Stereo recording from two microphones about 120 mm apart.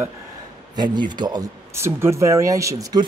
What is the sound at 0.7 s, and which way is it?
Speech, 40° right (ahead or behind).